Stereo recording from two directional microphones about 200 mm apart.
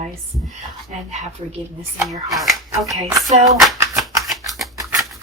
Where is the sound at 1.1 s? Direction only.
35° right (ahead or behind).